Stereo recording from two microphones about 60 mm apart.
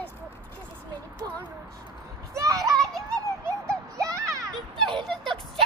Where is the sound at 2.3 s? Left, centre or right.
Right.